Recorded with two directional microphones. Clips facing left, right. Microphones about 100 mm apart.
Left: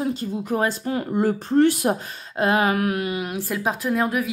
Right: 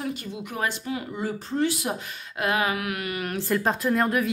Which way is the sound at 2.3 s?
30° left (ahead or behind).